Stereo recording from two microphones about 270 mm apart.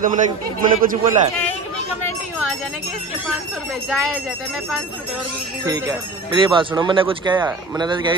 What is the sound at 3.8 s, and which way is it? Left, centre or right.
Speech, centre.